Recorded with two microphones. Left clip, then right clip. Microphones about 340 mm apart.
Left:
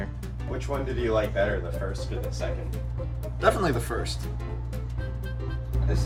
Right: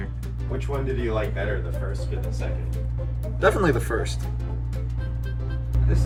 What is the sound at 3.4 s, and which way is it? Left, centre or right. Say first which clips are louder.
Speech: right 3 dB; centre.